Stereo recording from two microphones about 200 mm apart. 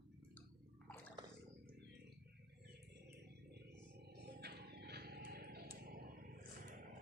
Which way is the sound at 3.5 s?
55° right (ahead or behind).